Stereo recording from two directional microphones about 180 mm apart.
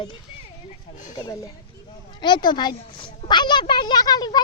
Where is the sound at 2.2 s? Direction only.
25° left (ahead or behind).